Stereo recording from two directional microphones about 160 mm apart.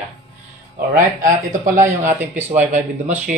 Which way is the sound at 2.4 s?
50° right (ahead or behind).